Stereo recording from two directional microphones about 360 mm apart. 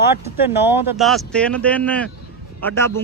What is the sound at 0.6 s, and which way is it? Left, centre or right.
A man's voice, centre.